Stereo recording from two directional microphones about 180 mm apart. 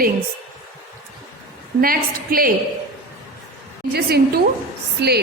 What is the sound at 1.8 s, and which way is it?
Speech, 55° right (ahead or behind).